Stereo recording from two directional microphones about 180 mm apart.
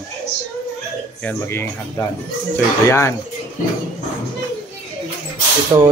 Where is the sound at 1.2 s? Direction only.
10° left (ahead or behind).